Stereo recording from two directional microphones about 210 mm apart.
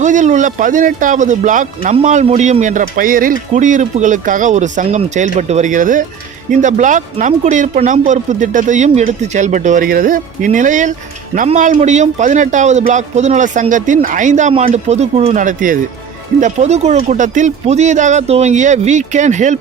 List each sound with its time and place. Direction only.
0.0 s speech: 35° right (ahead or behind)